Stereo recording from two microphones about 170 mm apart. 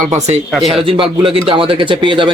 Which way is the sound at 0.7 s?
30° right (ahead or behind).